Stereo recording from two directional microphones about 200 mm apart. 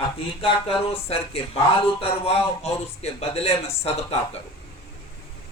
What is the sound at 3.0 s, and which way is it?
Speech, 30° left (ahead or behind).